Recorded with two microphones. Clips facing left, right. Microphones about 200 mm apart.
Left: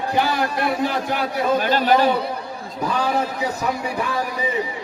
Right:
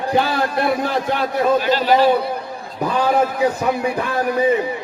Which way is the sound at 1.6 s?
50° left (ahead or behind).